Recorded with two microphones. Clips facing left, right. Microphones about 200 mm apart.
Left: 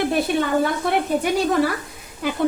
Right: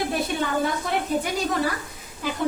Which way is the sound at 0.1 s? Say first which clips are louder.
Left 5 dB; 65° left (ahead or behind).